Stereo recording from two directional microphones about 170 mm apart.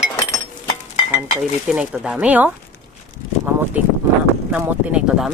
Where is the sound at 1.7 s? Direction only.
5° right (ahead or behind).